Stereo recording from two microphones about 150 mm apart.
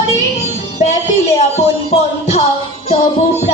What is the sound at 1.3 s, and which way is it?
Music, 45° left (ahead or behind).